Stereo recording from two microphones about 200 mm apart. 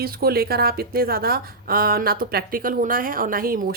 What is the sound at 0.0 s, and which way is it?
A woman's voice, 50° right (ahead or behind).